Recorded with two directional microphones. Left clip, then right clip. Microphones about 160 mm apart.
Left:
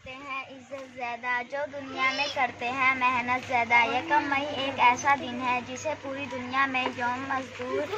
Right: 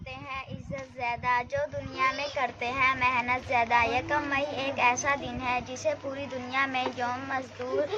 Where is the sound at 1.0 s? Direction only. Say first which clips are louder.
Right 3 dB; 20° right (ahead or behind).